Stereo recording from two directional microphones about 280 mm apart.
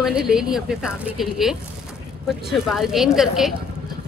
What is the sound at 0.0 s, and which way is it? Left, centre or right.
Speech, centre.